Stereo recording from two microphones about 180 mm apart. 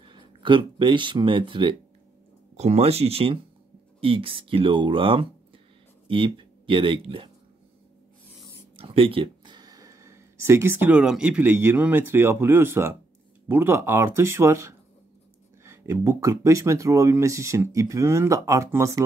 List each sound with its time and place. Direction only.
0.0 s speech: 25° right (ahead or behind)
8.7 s speech: 30° right (ahead or behind)